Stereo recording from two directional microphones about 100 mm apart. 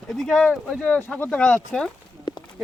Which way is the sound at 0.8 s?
15° left (ahead or behind).